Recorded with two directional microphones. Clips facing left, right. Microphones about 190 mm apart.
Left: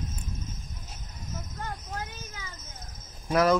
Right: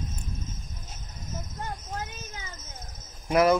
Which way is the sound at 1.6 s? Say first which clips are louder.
Right 1 dB; 20° right (ahead or behind).